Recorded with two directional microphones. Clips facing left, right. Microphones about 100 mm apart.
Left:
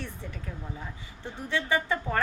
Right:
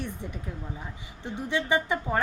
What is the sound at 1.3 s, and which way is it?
Speech, 20° right (ahead or behind).